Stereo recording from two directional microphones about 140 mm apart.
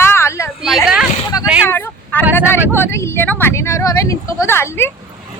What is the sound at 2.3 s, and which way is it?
Speech, 15° left (ahead or behind).